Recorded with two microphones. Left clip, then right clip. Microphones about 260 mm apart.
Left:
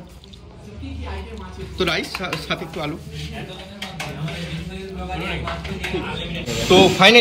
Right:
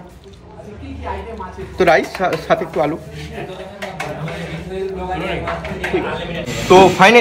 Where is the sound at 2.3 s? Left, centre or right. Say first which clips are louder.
Right 9 dB; right.